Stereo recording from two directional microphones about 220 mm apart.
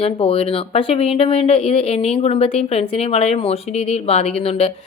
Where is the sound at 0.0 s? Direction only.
25° left (ahead or behind).